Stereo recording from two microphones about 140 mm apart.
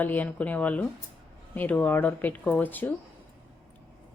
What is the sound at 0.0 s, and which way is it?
A woman's voice, 10° left (ahead or behind).